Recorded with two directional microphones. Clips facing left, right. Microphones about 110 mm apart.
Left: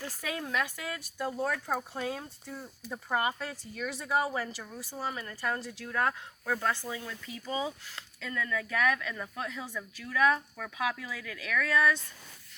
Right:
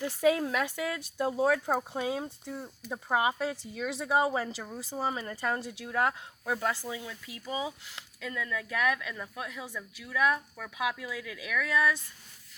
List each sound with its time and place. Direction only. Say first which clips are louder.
0.0 s speech: right 11 dB; 25° right (ahead or behind)